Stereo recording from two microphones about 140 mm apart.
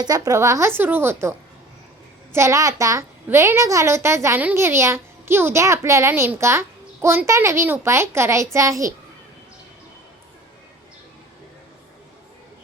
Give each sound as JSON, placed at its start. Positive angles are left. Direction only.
{"t": 0.0, "sound": "a woman's voice", "side_deg": -25}